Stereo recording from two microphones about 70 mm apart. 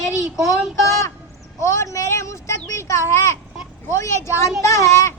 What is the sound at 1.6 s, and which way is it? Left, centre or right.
A child's voice, left.